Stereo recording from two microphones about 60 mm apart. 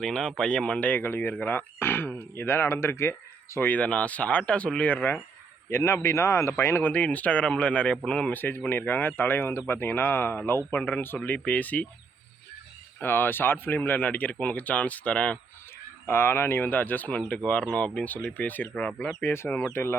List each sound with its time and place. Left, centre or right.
0.0 s speech: centre; by 3.6 s left
3.6 s speech: left
5.7 s speech: left
6.5 s speech: left
6.8 s speech: left
8.3 s speech: left
13.0 s speech: left
16.0 s speech: left
18.8 s speech: centre
19.2 s speech: left